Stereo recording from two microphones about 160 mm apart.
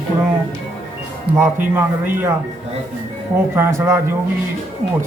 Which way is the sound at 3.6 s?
15° right (ahead or behind).